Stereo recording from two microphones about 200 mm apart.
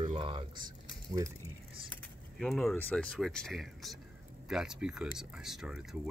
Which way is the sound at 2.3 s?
Centre (ahead or behind).